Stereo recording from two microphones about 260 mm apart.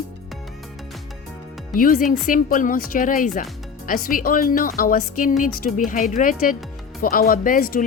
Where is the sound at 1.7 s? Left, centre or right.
Left.